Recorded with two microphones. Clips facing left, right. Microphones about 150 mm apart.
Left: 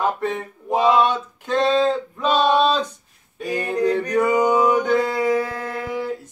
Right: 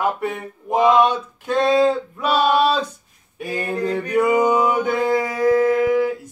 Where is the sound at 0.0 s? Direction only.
10° right (ahead or behind).